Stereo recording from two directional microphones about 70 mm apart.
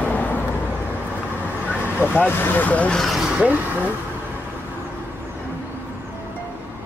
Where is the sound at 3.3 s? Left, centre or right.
Centre.